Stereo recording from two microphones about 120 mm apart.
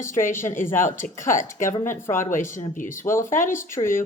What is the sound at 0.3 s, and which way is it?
Speech, 20° left (ahead or behind).